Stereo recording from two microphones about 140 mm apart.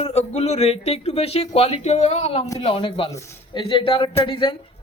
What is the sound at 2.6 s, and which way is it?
Speech, 40° left (ahead or behind).